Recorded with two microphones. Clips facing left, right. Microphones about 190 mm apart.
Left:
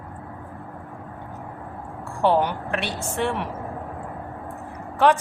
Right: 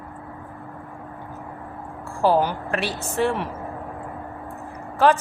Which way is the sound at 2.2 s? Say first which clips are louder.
Right 1 dB; 5° right (ahead or behind).